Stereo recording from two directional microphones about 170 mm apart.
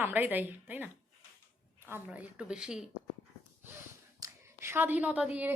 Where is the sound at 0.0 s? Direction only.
10° right (ahead or behind).